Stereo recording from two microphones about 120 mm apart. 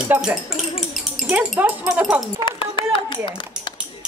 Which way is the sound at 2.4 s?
40° left (ahead or behind).